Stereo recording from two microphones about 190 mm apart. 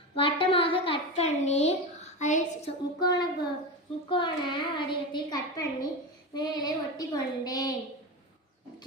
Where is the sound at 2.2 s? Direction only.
40° left (ahead or behind).